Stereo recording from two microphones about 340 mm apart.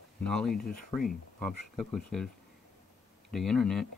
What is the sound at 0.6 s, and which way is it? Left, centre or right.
Speech, left.